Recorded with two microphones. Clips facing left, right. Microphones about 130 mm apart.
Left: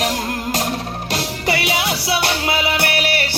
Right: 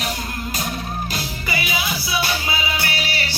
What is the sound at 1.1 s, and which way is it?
Music, 80° left.